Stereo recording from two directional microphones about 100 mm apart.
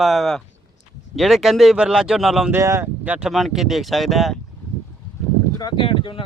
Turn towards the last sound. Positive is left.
turn(degrees=60)  # may be behind; listen again after turning